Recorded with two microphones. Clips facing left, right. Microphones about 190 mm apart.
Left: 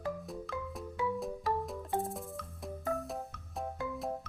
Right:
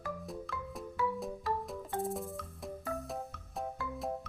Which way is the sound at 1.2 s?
Centre (ahead or behind).